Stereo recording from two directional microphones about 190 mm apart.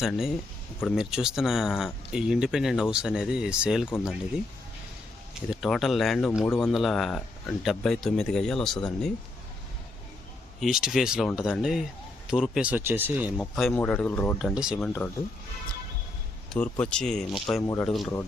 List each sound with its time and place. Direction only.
0.0 s speech: centre (ahead or behind)
5.5 s speech: centre (ahead or behind)
10.6 s speech: centre (ahead or behind)
13.3 s speech: centre (ahead or behind)
14.3 s speech: 5° right (ahead or behind)
14.8 s speech: 5° left (ahead or behind)
16.5 s speech: 5° left (ahead or behind)